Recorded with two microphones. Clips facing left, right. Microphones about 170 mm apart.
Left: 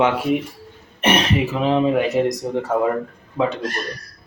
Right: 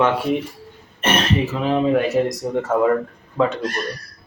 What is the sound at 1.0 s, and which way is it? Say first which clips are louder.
Speech: left 1 dB; 15° left (ahead or behind).